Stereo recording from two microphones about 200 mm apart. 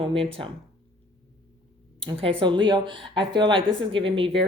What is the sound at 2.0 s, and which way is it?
Speech, 30° right (ahead or behind).